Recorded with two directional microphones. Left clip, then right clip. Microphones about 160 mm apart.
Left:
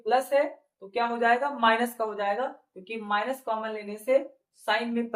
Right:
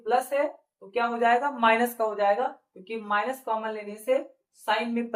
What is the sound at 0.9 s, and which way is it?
Speech, 20° right (ahead or behind).